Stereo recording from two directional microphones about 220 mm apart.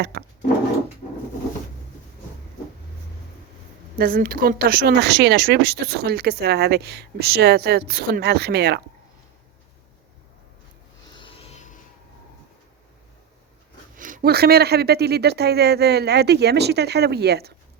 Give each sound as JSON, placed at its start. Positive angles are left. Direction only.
{"t": 0.0, "sound": "speech", "side_deg": -45}
{"t": 3.9, "sound": "speech", "side_deg": -40}
{"t": 11.1, "sound": "a sound", "side_deg": 25}
{"t": 13.9, "sound": "speech", "side_deg": -35}